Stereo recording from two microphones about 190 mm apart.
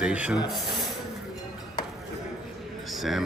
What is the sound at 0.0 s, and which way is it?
Speech, 5° right (ahead or behind).